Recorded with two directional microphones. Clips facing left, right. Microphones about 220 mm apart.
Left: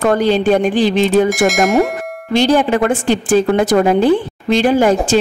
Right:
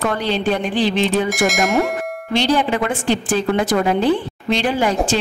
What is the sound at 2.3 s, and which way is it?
A woman's voice, 45° left (ahead or behind).